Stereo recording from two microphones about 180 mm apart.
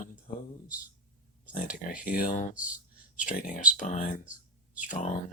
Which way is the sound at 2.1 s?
50° left (ahead or behind).